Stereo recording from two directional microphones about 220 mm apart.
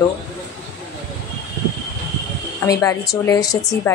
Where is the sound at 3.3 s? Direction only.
15° left (ahead or behind).